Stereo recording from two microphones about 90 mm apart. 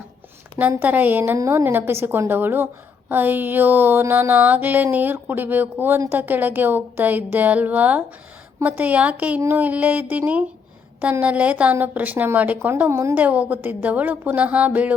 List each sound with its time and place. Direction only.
0.8 s a woman's voice: 20° right (ahead or behind)
13.1 s speech: 15° right (ahead or behind)